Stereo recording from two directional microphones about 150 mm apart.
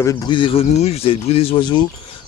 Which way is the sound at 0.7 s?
45° left (ahead or behind).